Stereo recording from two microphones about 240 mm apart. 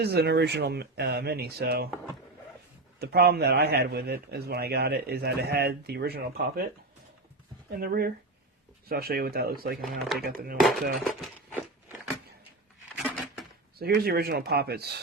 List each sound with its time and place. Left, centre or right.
0.0 s speech: right
3.0 s a man's voice: right
7.8 s a man's voice: right
9.8 s speech: centre
10.2 s a man's voice: right
13.0 s a sound: centre
13.7 s a man's voice: right